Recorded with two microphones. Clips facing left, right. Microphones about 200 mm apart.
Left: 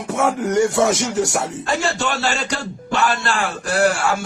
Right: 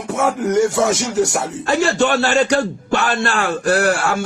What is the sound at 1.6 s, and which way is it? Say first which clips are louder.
A man's voice: right 9 dB; 60° right (ahead or behind).